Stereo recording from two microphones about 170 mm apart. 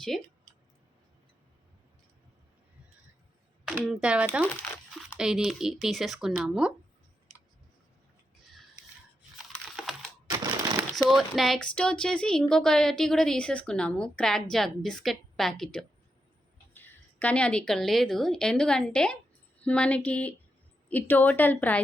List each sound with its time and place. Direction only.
3.7 s speech: 5° right (ahead or behind)
9.7 s crushing: centre (ahead or behind)
10.2 s crushing: 15° right (ahead or behind)
10.9 s a woman's voice: centre (ahead or behind)